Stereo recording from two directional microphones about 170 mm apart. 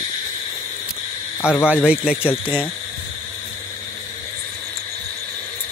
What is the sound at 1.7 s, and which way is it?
Speech, 5° right (ahead or behind).